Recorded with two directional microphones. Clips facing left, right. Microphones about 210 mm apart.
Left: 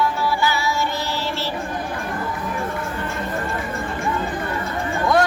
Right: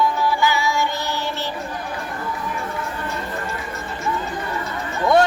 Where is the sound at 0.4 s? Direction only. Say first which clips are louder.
Right 2 dB; 15° right (ahead or behind).